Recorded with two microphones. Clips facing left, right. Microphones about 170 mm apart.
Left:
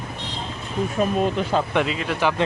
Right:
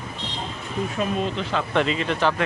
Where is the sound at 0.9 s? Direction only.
45° left (ahead or behind).